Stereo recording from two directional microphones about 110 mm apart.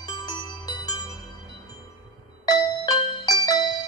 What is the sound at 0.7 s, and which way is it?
Music, 35° left (ahead or behind).